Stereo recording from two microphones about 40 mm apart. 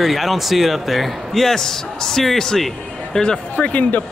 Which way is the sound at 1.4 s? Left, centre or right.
Centre.